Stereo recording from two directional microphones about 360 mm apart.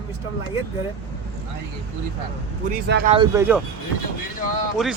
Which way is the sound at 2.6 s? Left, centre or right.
Right.